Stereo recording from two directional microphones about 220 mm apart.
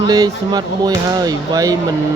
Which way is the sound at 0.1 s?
15° right (ahead or behind).